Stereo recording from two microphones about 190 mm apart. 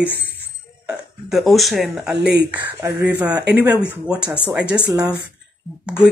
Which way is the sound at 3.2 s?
10° right (ahead or behind).